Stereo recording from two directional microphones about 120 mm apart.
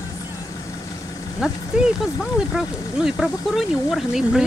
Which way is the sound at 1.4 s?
5° right (ahead or behind).